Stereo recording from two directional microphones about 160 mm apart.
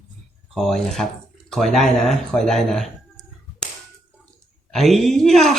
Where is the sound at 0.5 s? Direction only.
Centre (ahead or behind).